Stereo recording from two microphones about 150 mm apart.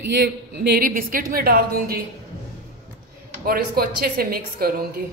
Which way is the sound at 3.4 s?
90° right.